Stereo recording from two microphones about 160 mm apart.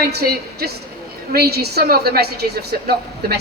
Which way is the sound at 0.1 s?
85° right.